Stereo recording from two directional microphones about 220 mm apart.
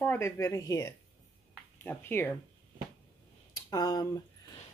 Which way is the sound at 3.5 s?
15° left (ahead or behind).